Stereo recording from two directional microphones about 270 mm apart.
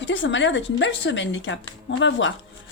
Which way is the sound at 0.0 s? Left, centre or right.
Left.